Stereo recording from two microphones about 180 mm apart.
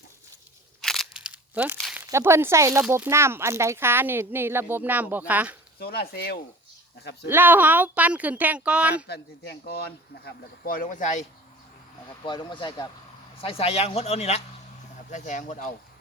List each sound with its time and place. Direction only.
0.8 s crunch: centre (ahead or behind)
1.8 s a sound: 5° right (ahead or behind)
2.0 s speech: 15° right (ahead or behind)
5.8 s speech: 60° left (ahead or behind)
7.3 s speech: 10° right (ahead or behind)
9.0 s speech: 65° left (ahead or behind); by 11.3 s 40° left (ahead or behind)
12.2 s a man's voice: 25° left (ahead or behind); by 15.7 s 45° left (ahead or behind)